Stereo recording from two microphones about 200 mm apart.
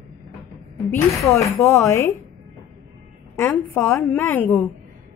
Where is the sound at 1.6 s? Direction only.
15° left (ahead or behind).